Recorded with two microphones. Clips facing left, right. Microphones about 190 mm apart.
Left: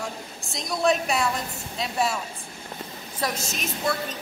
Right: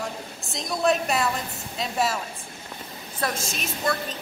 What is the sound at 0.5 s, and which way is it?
A woman's voice, centre (ahead or behind).